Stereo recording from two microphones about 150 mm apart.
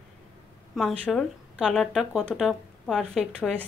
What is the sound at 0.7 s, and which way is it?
A woman's voice, 5° left (ahead or behind).